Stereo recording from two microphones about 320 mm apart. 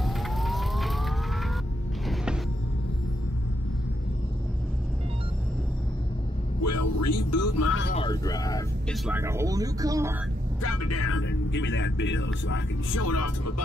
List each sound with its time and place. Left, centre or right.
0.0 s siren: centre
6.6 s speech: left
7.9 s speech: centre
9.0 s speech: centre
10.6 s speech: left